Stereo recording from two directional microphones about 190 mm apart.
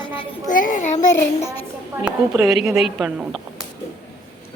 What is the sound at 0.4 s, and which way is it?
Speech, 45° left (ahead or behind).